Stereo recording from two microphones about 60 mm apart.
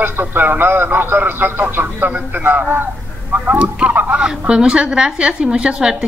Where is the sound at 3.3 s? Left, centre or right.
Right.